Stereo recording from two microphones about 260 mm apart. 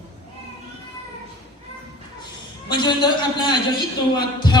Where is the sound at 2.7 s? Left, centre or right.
Centre.